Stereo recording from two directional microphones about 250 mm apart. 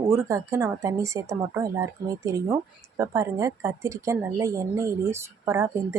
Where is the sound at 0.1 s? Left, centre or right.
Centre.